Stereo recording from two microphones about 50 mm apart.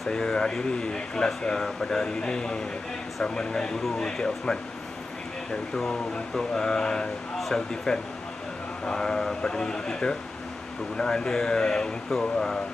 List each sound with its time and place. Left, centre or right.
0.1 s speech: centre
6.3 s speech: centre
7.3 s a sound: centre
8.8 s speech: centre